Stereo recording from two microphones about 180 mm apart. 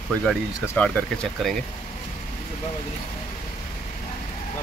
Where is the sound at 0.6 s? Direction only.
10° left (ahead or behind).